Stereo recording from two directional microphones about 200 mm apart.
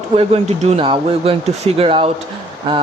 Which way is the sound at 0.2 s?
30° right (ahead or behind).